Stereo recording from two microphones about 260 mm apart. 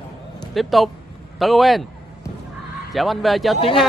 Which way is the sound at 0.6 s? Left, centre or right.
Centre.